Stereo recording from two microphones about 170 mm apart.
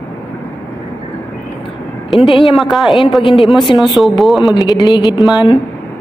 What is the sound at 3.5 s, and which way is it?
Speech, 25° left (ahead or behind).